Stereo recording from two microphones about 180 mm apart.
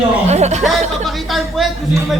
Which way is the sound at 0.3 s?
40° right (ahead or behind).